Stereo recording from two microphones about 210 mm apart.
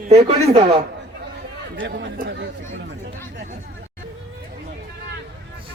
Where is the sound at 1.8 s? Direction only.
55° right (ahead or behind).